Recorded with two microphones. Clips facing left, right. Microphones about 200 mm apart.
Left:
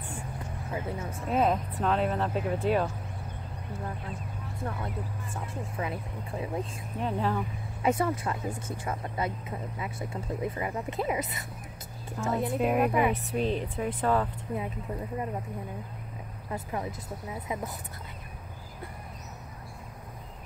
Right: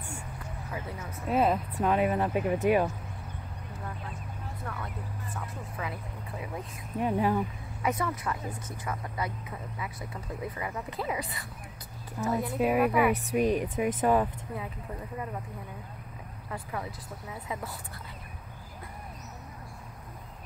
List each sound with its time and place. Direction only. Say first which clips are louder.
0.7 s speech: left 5 dB; 25° left (ahead or behind)
1.3 s speech: even; 5° right (ahead or behind)
4.6 s speech: left 6 dB; 30° left (ahead or behind)
7.0 s speech: right 3 dB; 10° right (ahead or behind)
7.8 s speech: left 4 dB; 30° left (ahead or behind)
12.5 s speech: right 1 dB; 5° right (ahead or behind)
16.4 s speech: left 3 dB; 25° left (ahead or behind)